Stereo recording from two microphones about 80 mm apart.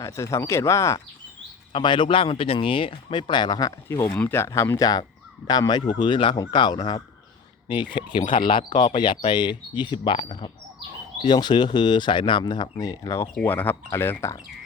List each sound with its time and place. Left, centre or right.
0.0 s speech: left
1.7 s speech: left
3.8 s speech: left
5.5 s speech: left
6.3 s speech: left
7.9 s speech: left
11.2 s speech: left
12.7 s speech: left
13.4 s speech: left